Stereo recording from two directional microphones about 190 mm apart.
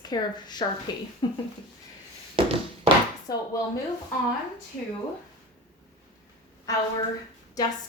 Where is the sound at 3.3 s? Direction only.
20° left (ahead or behind).